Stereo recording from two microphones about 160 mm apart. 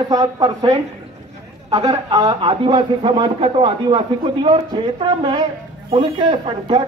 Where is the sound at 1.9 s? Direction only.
25° right (ahead or behind).